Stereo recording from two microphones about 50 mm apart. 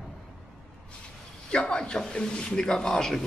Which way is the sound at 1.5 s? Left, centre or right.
Centre.